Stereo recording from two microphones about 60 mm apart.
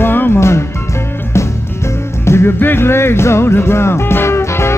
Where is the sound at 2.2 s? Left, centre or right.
Left.